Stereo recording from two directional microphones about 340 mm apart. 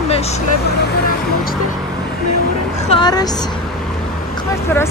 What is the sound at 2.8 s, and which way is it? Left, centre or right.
Speech, centre.